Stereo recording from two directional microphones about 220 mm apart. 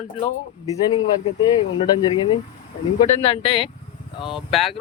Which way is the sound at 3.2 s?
25° left (ahead or behind).